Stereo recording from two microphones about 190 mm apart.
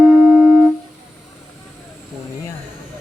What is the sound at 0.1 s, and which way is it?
Music, 5° right (ahead or behind).